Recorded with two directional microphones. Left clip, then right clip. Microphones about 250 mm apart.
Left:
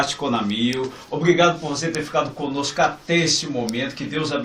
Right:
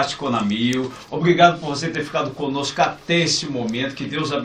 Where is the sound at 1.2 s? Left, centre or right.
Centre.